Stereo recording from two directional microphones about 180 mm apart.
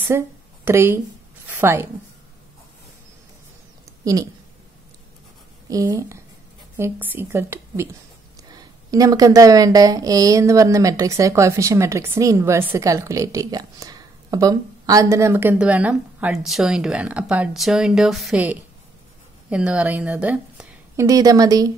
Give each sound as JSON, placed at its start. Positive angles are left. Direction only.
{"t": 0.1, "sound": "a woman's voice", "side_deg": -15}
{"t": 4.0, "sound": "speech", "side_deg": -20}
{"t": 5.7, "sound": "a woman's voice", "side_deg": -20}